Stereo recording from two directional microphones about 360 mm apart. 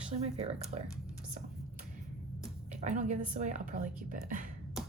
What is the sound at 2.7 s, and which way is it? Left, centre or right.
A woman's voice, centre.